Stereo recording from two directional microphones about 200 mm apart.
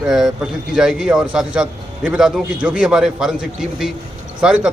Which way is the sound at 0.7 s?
5° right (ahead or behind).